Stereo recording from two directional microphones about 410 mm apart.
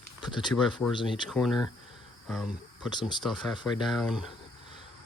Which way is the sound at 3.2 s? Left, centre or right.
Centre.